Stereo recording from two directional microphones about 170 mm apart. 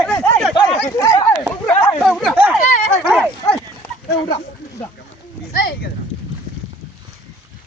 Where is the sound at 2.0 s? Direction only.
Centre (ahead or behind).